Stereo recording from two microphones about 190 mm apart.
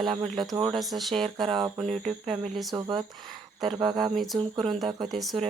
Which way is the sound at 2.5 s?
Centre (ahead or behind).